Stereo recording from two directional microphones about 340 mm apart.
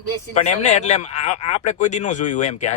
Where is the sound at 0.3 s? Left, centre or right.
Centre.